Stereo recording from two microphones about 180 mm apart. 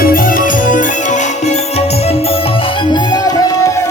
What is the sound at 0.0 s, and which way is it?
Music, 50° left (ahead or behind).